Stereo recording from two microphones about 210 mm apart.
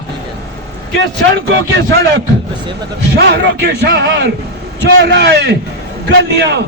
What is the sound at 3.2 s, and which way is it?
A man's voice, 50° right (ahead or behind).